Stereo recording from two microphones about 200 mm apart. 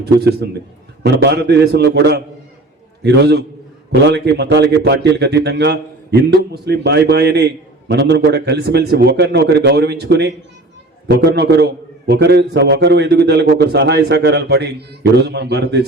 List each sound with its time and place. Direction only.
0.0 s a man's voice: 50° right (ahead or behind)